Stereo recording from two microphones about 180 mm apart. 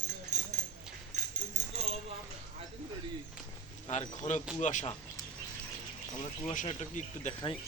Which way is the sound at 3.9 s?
40° left (ahead or behind).